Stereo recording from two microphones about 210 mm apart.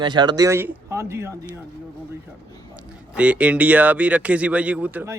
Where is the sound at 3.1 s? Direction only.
5° right (ahead or behind).